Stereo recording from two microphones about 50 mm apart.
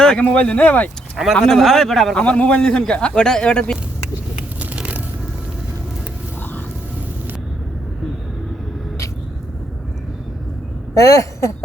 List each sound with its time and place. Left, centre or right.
0.2 s speech: left
1.1 s speech: centre
2.1 s a man's voice: left
4.6 s a sound: right
11.0 s speech: left